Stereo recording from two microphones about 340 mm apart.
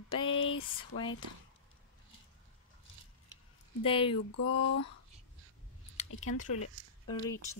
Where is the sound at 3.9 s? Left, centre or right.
Centre.